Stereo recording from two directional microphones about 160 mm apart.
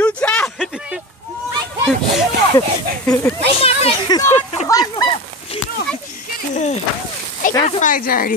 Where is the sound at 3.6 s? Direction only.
40° left (ahead or behind).